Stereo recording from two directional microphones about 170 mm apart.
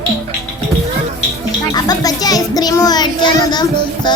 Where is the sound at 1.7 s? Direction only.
20° left (ahead or behind).